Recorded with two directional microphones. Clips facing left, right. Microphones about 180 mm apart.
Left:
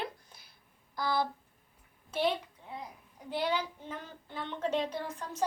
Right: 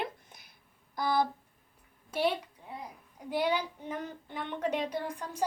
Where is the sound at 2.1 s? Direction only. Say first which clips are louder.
Right 1 dB; 10° right (ahead or behind).